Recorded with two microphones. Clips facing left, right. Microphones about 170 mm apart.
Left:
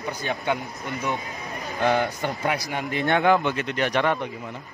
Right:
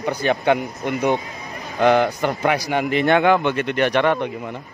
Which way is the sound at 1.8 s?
80° right.